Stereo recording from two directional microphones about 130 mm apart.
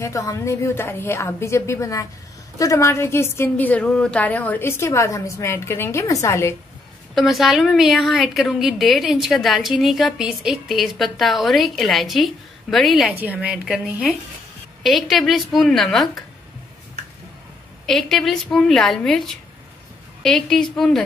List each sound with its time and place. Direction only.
0.0 s a woman's voice: 25° left (ahead or behind)
7.2 s a woman's voice: centre (ahead or behind)
13.1 s a woman's voice: 15° right (ahead or behind)
17.8 s a woman's voice: centre (ahead or behind)